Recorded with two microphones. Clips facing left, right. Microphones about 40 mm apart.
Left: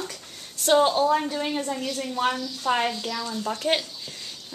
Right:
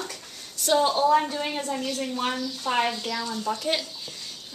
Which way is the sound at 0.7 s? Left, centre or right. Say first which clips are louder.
Left 3 dB; left.